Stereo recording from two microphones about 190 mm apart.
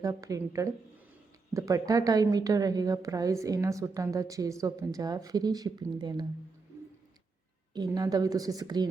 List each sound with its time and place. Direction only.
0.0 s a woman's voice: 15° right (ahead or behind)
7.7 s a woman's voice: 20° right (ahead or behind)